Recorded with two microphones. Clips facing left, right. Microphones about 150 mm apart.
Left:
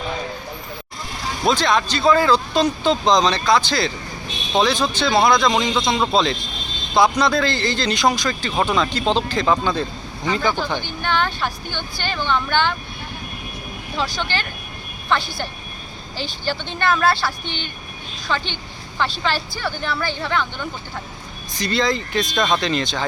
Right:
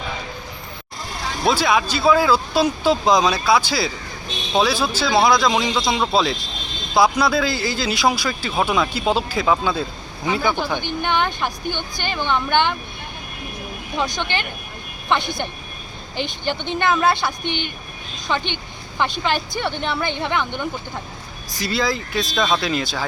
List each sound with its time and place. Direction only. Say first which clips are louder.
1.5 s speech: even; 10° right (ahead or behind)
13.9 s speech: right 1 dB; 20° right (ahead or behind)
17.4 s speech: right 5 dB; 60° right (ahead or behind)
18.3 s speech: right 1 dB; 15° right (ahead or behind)
21.6 s speech: left 2 dB; 5° right (ahead or behind)